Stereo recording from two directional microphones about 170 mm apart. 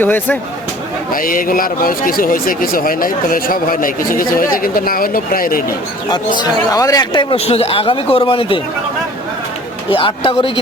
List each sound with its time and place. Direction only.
0.0 s speech: 10° left (ahead or behind)
1.1 s speech: 55° left (ahead or behind)
6.4 s a man's voice: 20° left (ahead or behind)
9.9 s a man's voice: 30° left (ahead or behind)